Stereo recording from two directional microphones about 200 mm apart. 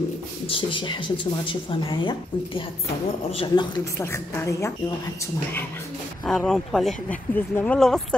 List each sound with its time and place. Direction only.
0.5 s a woman's voice: 25° left (ahead or behind)
6.2 s speech: centre (ahead or behind)